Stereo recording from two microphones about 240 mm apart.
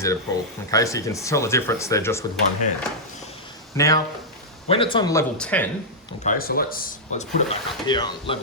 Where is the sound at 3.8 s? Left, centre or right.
Centre.